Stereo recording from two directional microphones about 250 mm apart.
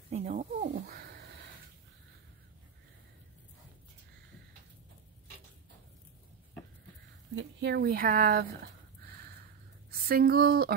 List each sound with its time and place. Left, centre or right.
0.1 s a sound: right
7.3 s speech: right
9.8 s speech: right